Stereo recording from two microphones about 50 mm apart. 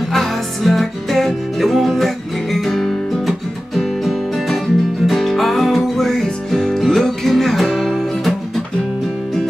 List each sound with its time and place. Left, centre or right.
0.1 s music: centre